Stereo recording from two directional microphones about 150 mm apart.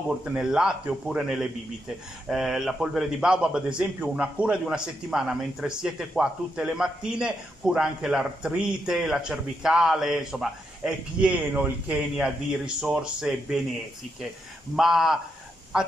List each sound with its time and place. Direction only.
0.2 s a man's voice: 5° right (ahead or behind)
14.8 s a man's voice: centre (ahead or behind)